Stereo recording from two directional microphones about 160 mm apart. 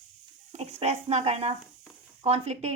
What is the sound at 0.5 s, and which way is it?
Speech, 40° right (ahead or behind).